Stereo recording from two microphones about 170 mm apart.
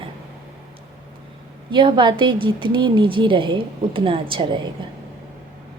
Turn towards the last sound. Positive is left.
turn(degrees=-30)  # may be behind; listen again after turning